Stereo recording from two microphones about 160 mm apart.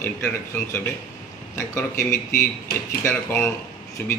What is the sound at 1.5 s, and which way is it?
A man's voice, 15° left (ahead or behind).